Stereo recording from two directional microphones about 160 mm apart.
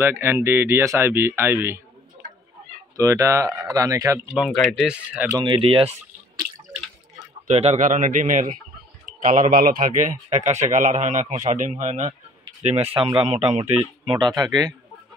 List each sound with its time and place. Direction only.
0.0 s speech: 15° right (ahead or behind)
3.0 s speech: 20° right (ahead or behind)
4.4 s speech: 5° left (ahead or behind)
5.4 s speech: 30° right (ahead or behind)
7.4 s speech: 45° right (ahead or behind); by 14.7 s 25° right (ahead or behind)